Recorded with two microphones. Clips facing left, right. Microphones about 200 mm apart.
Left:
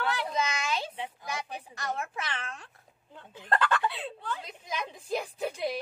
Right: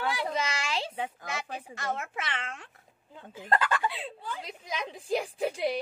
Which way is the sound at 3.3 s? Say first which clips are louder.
Even; 10° right (ahead or behind).